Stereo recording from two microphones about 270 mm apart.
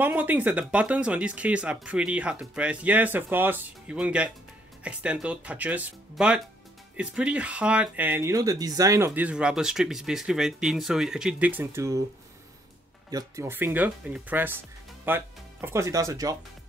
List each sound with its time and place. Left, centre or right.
0.0 s speech: centre
13.1 s speech: centre